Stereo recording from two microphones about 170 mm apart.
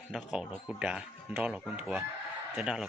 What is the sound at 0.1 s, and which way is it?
Speech, centre (ahead or behind).